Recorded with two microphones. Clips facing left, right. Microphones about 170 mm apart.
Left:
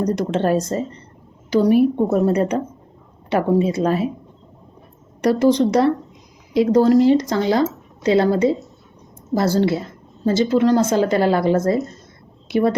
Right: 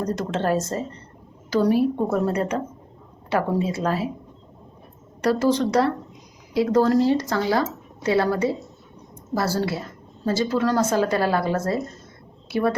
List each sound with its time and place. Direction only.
0.0 s a woman's voice: 15° left (ahead or behind)
5.2 s a woman's voice: 20° left (ahead or behind)